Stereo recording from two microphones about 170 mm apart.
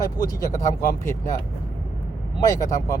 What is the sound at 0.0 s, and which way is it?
Speech, 20° left (ahead or behind).